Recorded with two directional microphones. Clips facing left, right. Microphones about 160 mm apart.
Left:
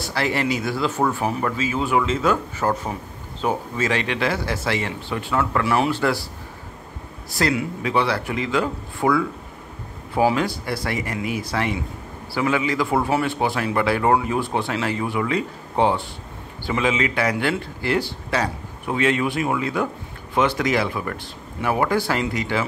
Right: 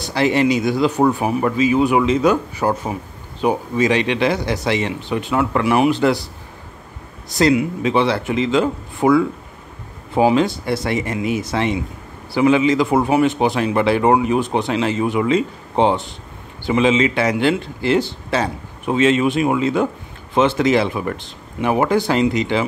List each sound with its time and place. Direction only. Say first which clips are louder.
0.0 s speech: right 7 dB; 20° right (ahead or behind)
7.2 s a man's voice: right 7 dB; 20° right (ahead or behind)